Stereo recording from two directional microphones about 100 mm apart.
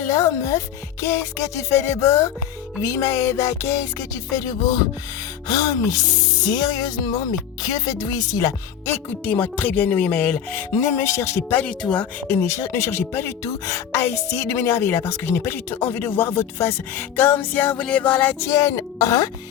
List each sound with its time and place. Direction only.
0.1 s speech: 30° left (ahead or behind)
1.0 s music: 30° left (ahead or behind)
6.5 s speech: 40° left (ahead or behind)
7.6 s music: 40° left (ahead or behind)
8.9 s speech: 20° left (ahead or behind)
11.6 s speech: 10° left (ahead or behind)
12.3 s speech: 25° left (ahead or behind)